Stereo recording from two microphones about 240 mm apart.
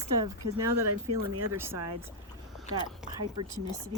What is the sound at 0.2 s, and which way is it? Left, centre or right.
Speech, centre.